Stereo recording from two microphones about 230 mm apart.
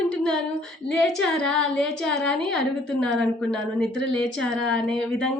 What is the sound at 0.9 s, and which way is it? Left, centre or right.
A woman's voice, centre.